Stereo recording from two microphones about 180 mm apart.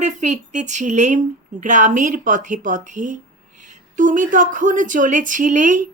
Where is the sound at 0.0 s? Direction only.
40° right (ahead or behind).